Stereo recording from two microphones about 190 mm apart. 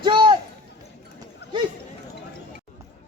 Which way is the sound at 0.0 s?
25° right (ahead or behind).